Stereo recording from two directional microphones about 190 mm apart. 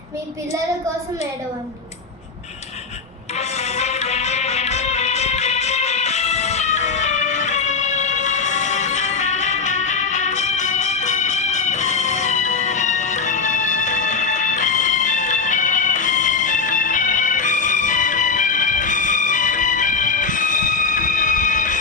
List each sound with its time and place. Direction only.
3.3 s music: 35° left (ahead or behind)